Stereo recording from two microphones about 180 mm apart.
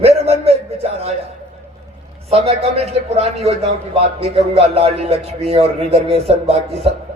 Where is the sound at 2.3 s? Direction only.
35° right (ahead or behind).